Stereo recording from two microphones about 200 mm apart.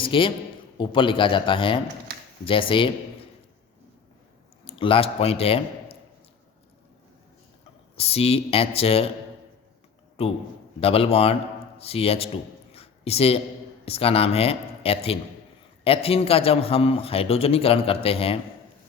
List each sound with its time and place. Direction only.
0.0 s a man's voice: 25° left (ahead or behind)
4.6 s speech: 25° left (ahead or behind)
7.9 s a man's voice: 30° left (ahead or behind)
10.2 s a man's voice: 30° left (ahead or behind)
12.7 s a sound: 30° left (ahead or behind)
13.8 s a man's voice: 30° left (ahead or behind)